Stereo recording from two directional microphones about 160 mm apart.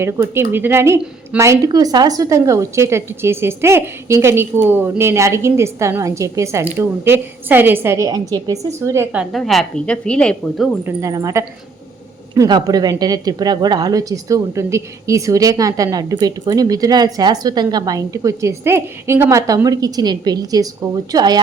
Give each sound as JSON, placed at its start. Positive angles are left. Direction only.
{"t": 0.0, "sound": "speech", "side_deg": -15}
{"t": 9.3, "sound": "a woman's voice", "side_deg": 0}
{"t": 10.8, "sound": "speech", "side_deg": -20}